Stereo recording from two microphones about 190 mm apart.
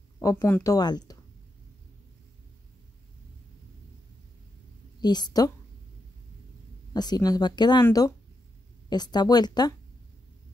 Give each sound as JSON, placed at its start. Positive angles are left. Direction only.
{"t": 0.2, "sound": "speech", "side_deg": 15}
{"t": 5.0, "sound": "speech", "side_deg": 20}
{"t": 6.9, "sound": "speech", "side_deg": 20}